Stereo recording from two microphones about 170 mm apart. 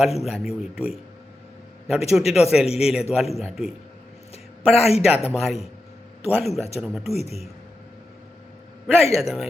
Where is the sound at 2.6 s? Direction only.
35° left (ahead or behind).